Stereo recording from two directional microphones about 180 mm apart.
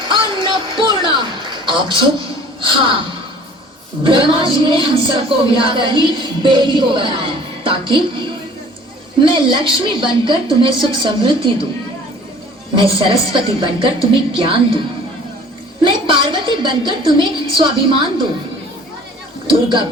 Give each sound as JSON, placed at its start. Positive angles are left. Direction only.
{"t": 0.1, "sound": "a sound", "side_deg": -25}
{"t": 2.6, "sound": "speech", "side_deg": -30}
{"t": 4.0, "sound": "speech", "side_deg": -30}
{"t": 9.3, "sound": "speech", "side_deg": -25}
{"t": 12.8, "sound": "speech", "side_deg": -30}
{"t": 15.8, "sound": "speech", "side_deg": -25}